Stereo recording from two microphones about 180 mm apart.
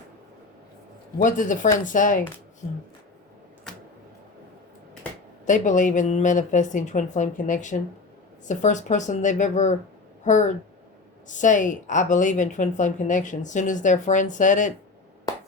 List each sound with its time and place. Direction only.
1.2 s a woman's voice: 45° left (ahead or behind)
3.7 s a sound: 5° left (ahead or behind)
5.5 s a woman's voice: 45° left (ahead or behind)